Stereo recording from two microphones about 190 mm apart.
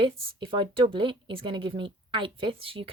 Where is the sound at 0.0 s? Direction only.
25° right (ahead or behind).